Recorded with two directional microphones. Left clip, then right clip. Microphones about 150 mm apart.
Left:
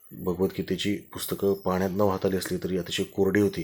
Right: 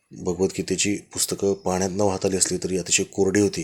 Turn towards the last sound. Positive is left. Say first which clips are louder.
# right 3 dB
turn(degrees=-40)  # may be behind; listen again after turning